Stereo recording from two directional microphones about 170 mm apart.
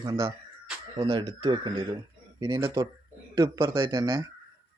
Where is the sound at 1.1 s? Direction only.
30° right (ahead or behind).